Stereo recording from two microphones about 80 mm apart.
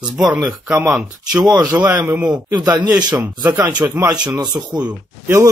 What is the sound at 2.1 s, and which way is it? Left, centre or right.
Speech, centre.